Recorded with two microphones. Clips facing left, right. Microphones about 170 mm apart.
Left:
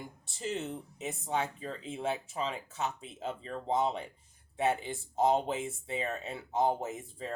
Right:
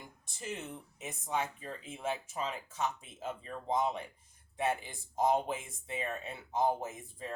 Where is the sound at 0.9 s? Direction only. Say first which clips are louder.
Left 2 dB; 30° left (ahead or behind).